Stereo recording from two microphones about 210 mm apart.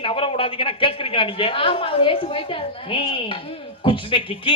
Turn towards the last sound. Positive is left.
turn(degrees=25)  # may be behind; listen again after turning